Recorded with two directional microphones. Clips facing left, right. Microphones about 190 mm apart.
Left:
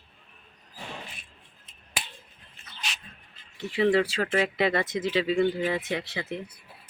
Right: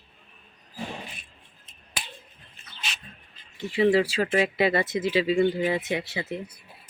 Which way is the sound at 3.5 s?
Centre (ahead or behind).